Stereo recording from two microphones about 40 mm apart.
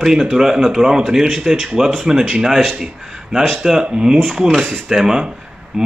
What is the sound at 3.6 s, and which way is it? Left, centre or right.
A man's voice, centre.